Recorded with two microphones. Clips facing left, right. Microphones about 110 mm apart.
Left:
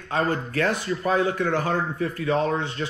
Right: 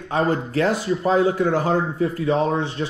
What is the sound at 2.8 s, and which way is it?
Speech, 35° right (ahead or behind).